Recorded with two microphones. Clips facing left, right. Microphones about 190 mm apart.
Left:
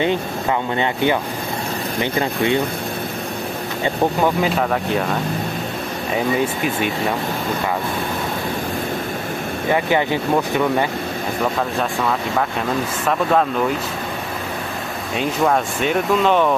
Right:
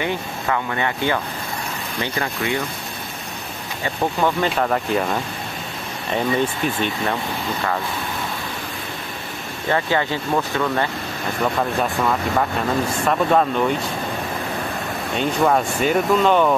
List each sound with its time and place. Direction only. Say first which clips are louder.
0.0 s speech: left 5 dB; 20° left (ahead or behind)
4.4 s speech: left 1 dB; centre (ahead or behind)
9.7 s speech: left 2 dB; 15° left (ahead or behind)
13.0 s speech: even; centre (ahead or behind)
15.1 s speech: even; centre (ahead or behind)